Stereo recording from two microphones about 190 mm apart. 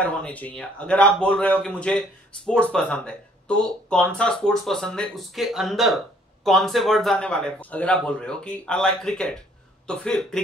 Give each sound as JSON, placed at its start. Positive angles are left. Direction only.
{"t": 0.0, "sound": "a man's voice", "side_deg": 10}